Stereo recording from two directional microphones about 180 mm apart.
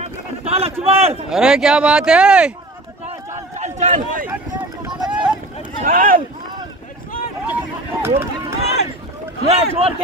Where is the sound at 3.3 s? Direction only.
40° right (ahead or behind).